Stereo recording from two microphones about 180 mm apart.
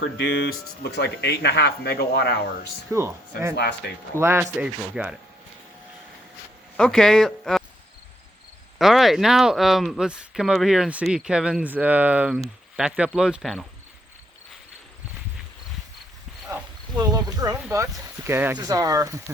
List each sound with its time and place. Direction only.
0.0 s speech: 65° left (ahead or behind)
2.9 s speech: 15° right (ahead or behind)
3.5 s speech: 65° left (ahead or behind)
4.2 s speech: 15° right (ahead or behind)
6.7 s speech: 5° left (ahead or behind)
8.8 s speech: centre (ahead or behind)
17.0 s speech: 20° right (ahead or behind)